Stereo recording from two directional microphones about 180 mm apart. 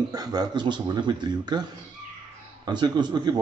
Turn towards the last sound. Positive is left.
turn(degrees=-25)  # may be behind; listen again after turning